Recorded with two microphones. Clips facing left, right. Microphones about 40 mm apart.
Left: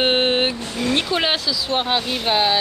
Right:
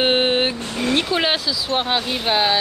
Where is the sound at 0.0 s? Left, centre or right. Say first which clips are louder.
Even; centre.